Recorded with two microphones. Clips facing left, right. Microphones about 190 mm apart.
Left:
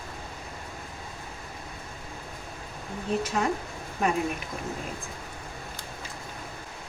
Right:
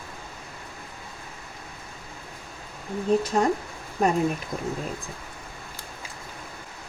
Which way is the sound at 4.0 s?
35° right (ahead or behind).